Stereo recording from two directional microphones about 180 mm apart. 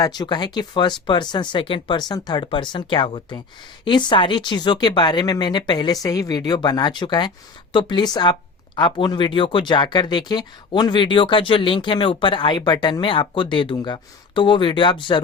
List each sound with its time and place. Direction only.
0.0 s speech: 20° left (ahead or behind)